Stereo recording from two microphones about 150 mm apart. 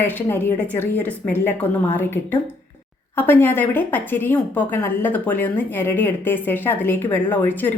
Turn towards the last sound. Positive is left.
turn(degrees=10)  # may be behind; listen again after turning